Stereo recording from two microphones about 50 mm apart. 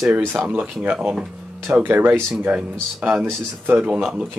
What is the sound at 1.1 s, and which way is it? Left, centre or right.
Speech, centre.